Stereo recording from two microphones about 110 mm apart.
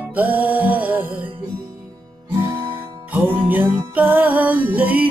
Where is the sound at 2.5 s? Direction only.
20° right (ahead or behind).